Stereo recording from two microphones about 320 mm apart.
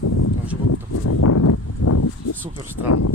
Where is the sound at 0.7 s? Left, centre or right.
Left.